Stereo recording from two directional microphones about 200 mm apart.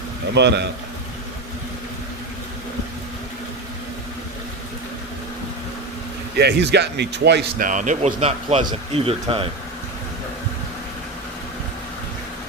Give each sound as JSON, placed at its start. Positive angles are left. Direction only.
{"t": 0.3, "sound": "speech", "side_deg": -60}
{"t": 6.3, "sound": "speech", "side_deg": -55}
{"t": 7.7, "sound": "speech", "side_deg": -40}